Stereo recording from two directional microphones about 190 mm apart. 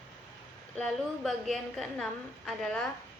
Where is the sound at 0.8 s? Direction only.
Centre (ahead or behind).